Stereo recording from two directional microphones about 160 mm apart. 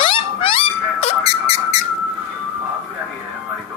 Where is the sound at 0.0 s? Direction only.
35° left (ahead or behind).